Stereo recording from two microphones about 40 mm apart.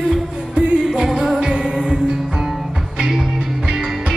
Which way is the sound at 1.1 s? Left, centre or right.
Centre.